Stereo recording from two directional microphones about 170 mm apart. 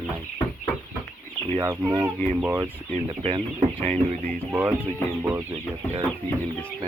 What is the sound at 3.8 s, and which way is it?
Speech, 40° right (ahead or behind).